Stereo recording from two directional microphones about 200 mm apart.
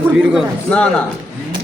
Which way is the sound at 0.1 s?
5° right (ahead or behind).